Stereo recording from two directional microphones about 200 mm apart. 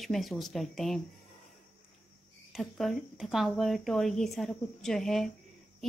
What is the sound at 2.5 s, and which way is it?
Speech, centre (ahead or behind).